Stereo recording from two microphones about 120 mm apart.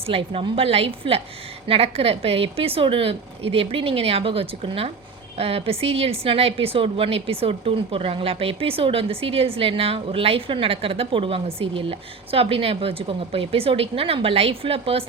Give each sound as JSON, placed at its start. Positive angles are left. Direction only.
{"t": 0.0, "sound": "speech", "side_deg": -50}